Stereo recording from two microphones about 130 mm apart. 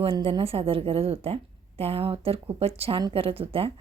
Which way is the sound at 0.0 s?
45° right (ahead or behind).